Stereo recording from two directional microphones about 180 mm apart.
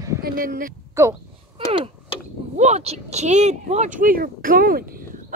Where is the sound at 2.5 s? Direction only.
40° right (ahead or behind); by 5.0 s 55° right (ahead or behind).